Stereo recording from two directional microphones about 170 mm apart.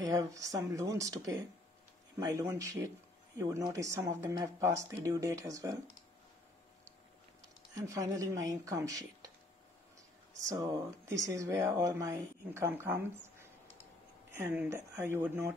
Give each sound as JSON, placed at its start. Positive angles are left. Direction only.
{"t": 0.0, "sound": "speech", "side_deg": -20}
{"t": 7.7, "sound": "speech", "side_deg": -20}
{"t": 10.5, "sound": "speech", "side_deg": -20}